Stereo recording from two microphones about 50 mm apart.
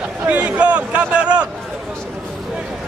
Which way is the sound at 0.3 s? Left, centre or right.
Right.